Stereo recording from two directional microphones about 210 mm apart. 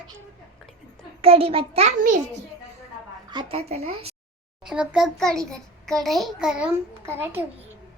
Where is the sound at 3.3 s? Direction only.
20° right (ahead or behind).